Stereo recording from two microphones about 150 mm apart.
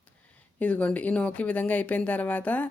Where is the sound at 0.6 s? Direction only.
10° left (ahead or behind).